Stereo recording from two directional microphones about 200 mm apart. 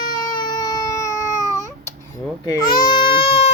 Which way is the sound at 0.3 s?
20° left (ahead or behind).